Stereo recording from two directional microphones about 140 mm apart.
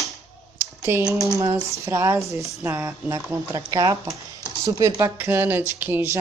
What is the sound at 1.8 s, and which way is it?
Speech, 20° right (ahead or behind).